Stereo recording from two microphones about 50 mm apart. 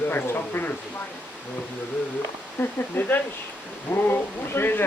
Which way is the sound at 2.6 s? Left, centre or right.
Left.